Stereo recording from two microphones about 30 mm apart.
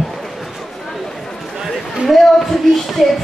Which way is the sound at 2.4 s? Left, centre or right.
Centre.